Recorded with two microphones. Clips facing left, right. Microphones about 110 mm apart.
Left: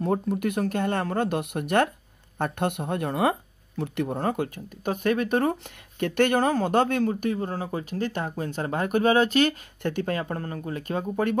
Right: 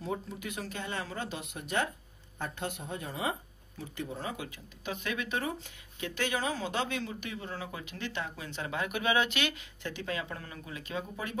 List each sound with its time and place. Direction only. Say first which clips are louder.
0.0 s speech: left 12 dB; 60° left (ahead or behind); by 9.6 s 40° left (ahead or behind)
9.8 s speech: left 9 dB; 50° left (ahead or behind)